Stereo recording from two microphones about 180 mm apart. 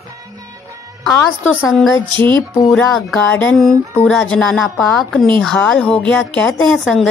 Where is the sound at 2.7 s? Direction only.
Centre (ahead or behind).